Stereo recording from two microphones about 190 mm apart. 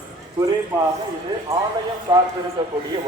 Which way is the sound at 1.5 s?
15° right (ahead or behind).